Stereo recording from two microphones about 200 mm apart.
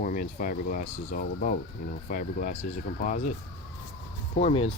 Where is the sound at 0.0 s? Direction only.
45° left (ahead or behind).